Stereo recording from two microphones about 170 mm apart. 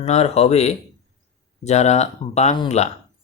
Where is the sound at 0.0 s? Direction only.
40° left (ahead or behind).